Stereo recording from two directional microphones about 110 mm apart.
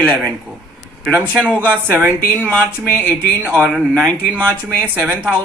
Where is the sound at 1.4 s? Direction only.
10° left (ahead or behind).